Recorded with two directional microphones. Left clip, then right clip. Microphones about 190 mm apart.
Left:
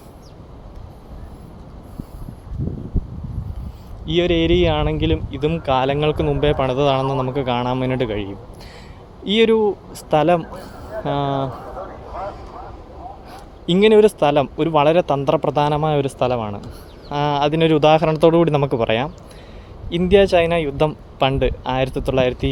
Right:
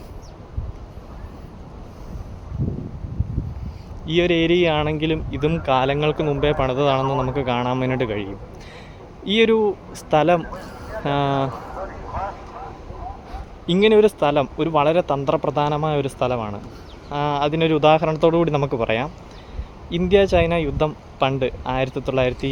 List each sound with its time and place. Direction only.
4.0 s speech: 5° left (ahead or behind)
13.7 s speech: 15° left (ahead or behind)